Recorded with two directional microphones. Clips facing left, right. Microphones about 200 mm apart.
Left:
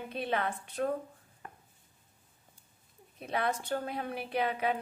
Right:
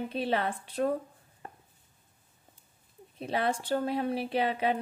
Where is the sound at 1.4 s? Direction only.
30° right (ahead or behind).